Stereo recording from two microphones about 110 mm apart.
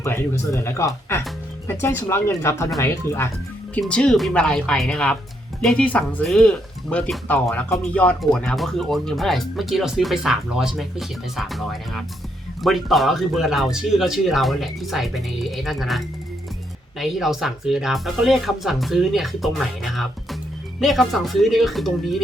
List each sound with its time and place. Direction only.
0.0 s speech: 25° left (ahead or behind)
3.8 s speech: 10° left (ahead or behind)